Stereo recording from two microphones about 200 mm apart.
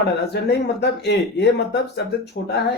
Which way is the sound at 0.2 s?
55° left (ahead or behind).